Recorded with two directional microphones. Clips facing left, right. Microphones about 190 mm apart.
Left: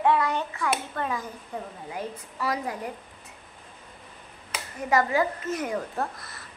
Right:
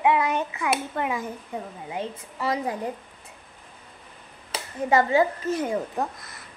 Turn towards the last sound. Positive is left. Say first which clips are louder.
# right 3 dB
turn(degrees=-25)  # may be behind; listen again after turning